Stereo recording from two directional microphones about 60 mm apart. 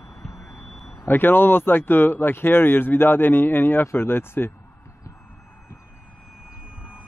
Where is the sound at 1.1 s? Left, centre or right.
Left.